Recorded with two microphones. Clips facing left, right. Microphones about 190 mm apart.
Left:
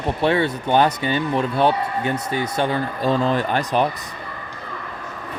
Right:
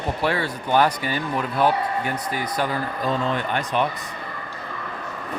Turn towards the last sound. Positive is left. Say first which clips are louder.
# left 3 dB
turn(degrees=35)  # may be behind; listen again after turning